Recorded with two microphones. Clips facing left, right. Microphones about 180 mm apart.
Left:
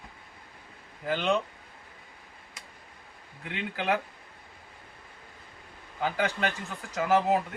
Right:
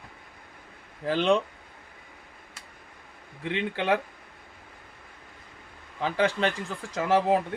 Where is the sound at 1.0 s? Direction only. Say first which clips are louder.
Right 4 dB; 35° right (ahead or behind).